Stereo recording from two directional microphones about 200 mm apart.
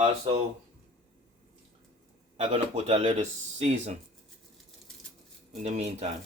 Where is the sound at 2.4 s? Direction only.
30° right (ahead or behind).